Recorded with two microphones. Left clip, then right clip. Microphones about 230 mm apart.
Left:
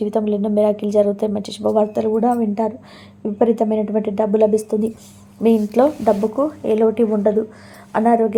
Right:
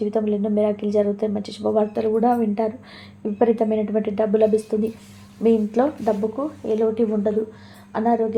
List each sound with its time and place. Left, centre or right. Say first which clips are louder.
0.0 s a woman's voice: left 3 dB; left